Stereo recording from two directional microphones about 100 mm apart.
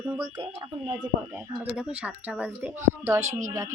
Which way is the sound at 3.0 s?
30° right (ahead or behind).